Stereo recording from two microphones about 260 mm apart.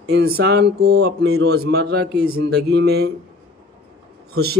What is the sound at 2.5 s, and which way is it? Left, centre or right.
Speech, right.